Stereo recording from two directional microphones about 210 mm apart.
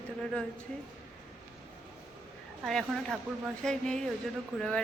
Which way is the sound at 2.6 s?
Centre (ahead or behind).